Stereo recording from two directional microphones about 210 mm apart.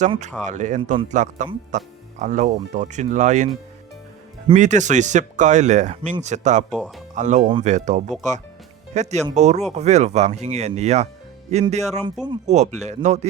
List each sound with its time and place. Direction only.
0.0 s speech: 35° right (ahead or behind)
4.5 s speech: 35° right (ahead or behind)
6.7 s speech: centre (ahead or behind)
7.2 s speech: 35° right (ahead or behind)